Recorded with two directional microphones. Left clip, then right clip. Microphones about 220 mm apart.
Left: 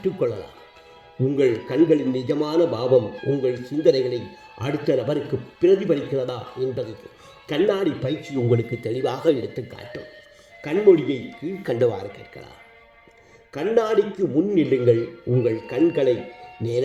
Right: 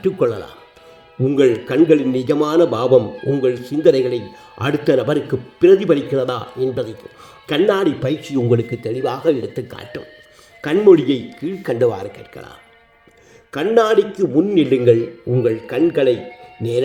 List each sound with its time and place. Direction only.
0.0 s a man's voice: 25° right (ahead or behind); by 9.5 s 5° right (ahead or behind)
9.6 s a man's voice: 20° right (ahead or behind)
11.6 s a man's voice: 10° right (ahead or behind)